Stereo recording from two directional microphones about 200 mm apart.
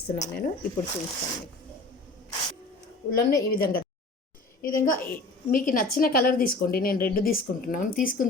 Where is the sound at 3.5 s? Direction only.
50° left (ahead or behind).